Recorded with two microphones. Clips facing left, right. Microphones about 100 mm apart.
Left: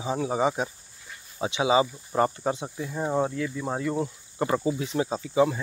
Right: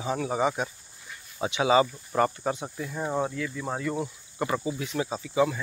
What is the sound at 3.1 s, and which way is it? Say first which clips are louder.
Speech: left 3 dB; 10° left (ahead or behind).